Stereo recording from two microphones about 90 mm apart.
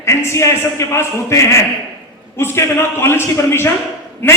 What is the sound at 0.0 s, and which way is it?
A man's voice, 30° left (ahead or behind).